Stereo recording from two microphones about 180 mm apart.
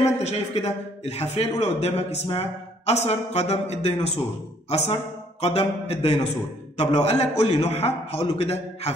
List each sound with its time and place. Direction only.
0.2 s a man's voice: 35° left (ahead or behind)